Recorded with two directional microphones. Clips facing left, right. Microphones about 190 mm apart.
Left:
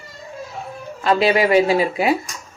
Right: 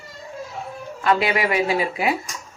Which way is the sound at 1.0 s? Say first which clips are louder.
Left 4 dB; 30° left (ahead or behind).